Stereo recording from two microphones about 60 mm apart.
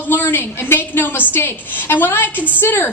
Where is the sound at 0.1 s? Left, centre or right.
Left.